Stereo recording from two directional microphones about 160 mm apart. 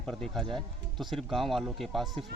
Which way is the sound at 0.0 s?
5° left (ahead or behind).